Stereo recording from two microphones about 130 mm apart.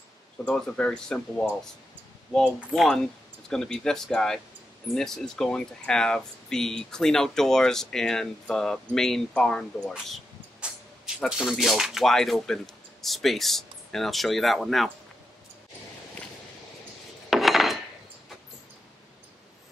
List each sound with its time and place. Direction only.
0.5 s speech: 5° left (ahead or behind)
11.2 s speech: 5° right (ahead or behind)
17.3 s cutlery: centre (ahead or behind)